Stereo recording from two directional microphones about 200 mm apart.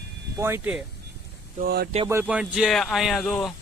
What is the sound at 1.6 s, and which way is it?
Speech, 55° right (ahead or behind).